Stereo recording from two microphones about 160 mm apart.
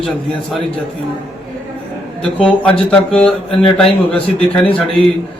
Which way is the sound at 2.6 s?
5° left (ahead or behind).